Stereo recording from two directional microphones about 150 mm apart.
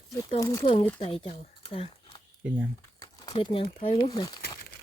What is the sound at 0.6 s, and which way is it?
Speech, 40° left (ahead or behind).